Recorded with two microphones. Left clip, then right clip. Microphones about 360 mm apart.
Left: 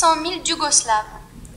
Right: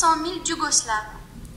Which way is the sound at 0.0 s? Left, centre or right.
Centre.